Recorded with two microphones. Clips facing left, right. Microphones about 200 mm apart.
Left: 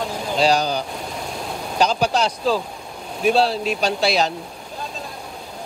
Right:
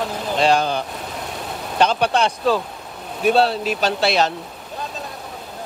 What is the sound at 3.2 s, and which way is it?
Speech, centre (ahead or behind).